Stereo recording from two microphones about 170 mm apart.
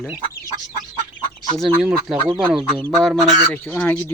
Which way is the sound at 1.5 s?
Centre (ahead or behind).